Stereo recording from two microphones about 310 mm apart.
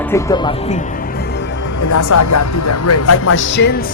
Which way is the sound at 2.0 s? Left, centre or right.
Left.